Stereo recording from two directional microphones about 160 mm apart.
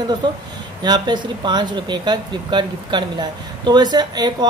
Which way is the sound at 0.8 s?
25° right (ahead or behind).